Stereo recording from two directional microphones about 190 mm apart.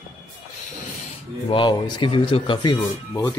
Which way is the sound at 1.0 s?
30° left (ahead or behind).